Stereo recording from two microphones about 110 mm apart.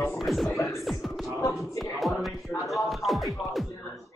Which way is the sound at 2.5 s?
15° left (ahead or behind).